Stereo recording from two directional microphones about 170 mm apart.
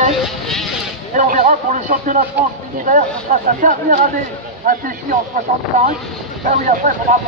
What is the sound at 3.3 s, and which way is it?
Speech, 40° right (ahead or behind).